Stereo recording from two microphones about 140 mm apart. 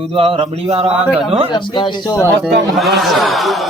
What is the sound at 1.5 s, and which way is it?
Speech, 35° left (ahead or behind).